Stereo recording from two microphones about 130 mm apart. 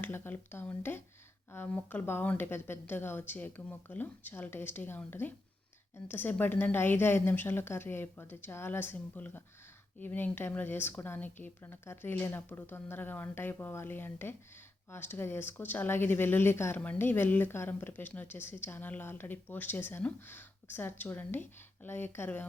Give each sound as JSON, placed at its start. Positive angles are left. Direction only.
{"t": 0.0, "sound": "speech", "side_deg": 15}